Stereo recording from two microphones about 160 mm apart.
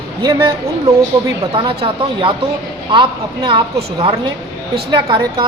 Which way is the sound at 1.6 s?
30° right (ahead or behind).